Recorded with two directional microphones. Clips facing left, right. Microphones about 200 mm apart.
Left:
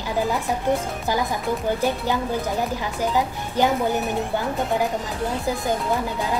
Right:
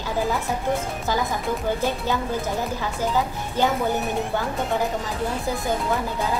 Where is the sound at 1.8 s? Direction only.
15° left (ahead or behind).